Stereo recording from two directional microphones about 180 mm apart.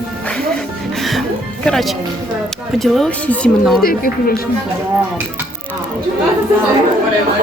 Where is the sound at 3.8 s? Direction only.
55° left (ahead or behind).